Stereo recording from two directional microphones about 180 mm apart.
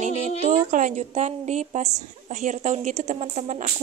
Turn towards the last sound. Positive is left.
turn(degrees=-40)  # may be behind; listen again after turning